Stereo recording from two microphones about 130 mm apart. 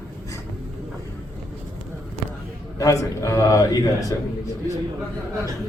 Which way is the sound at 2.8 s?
25° left (ahead or behind).